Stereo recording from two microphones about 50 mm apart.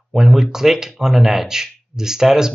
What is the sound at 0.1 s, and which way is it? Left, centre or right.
Speech, centre.